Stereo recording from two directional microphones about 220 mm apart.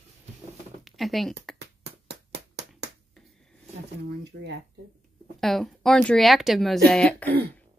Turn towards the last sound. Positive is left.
turn(degrees=5)  # may be behind; listen again after turning